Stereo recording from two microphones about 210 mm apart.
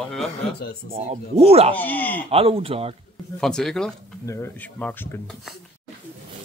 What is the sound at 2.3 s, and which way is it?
Speech, 25° right (ahead or behind).